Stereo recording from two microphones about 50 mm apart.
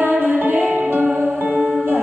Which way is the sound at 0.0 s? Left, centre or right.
Right.